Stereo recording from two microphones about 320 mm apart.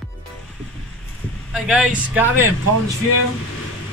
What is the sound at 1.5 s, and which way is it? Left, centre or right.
Speech, centre.